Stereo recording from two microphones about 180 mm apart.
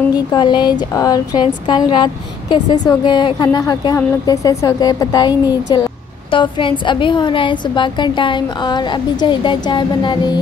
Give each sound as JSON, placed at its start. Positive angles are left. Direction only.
{"t": 0.1, "sound": "a woman's voice", "side_deg": 25}